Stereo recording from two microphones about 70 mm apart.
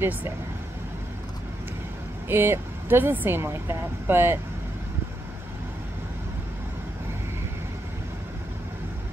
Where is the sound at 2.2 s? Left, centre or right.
Right.